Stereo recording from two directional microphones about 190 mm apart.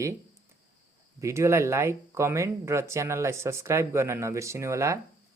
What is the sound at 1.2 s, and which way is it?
Speech, 15° right (ahead or behind).